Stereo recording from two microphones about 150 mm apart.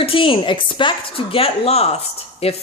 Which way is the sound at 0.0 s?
35° left (ahead or behind).